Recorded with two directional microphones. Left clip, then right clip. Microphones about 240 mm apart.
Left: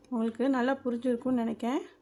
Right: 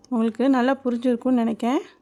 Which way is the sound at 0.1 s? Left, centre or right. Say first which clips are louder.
Right 8 dB; right.